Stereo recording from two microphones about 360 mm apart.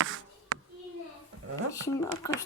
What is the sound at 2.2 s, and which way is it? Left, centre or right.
Speech, centre.